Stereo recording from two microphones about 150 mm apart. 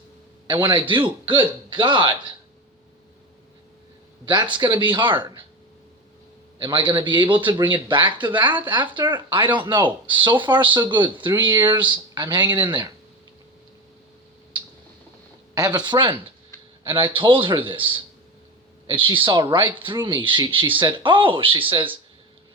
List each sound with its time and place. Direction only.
0.4 s speech: 30° right (ahead or behind)
4.3 s speech: 30° right (ahead or behind)
6.6 s speech: 30° right (ahead or behind)
15.5 s speech: 25° right (ahead or behind)